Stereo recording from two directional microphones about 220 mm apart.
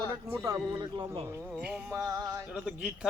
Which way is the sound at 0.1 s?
15° right (ahead or behind).